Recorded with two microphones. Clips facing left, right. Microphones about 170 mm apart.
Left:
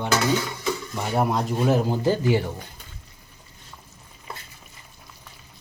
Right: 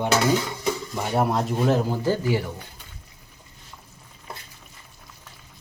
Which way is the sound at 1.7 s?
20° left (ahead or behind).